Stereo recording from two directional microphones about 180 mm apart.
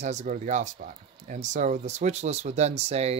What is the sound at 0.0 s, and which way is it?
Speech, 40° right (ahead or behind).